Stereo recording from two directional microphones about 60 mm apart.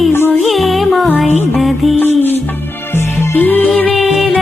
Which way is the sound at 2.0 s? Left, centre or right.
Left.